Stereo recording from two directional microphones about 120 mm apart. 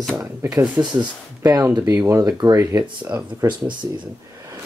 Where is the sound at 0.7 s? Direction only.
35° right (ahead or behind).